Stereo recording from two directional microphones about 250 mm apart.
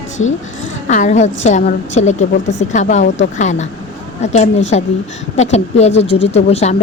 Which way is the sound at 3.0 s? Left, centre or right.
Left.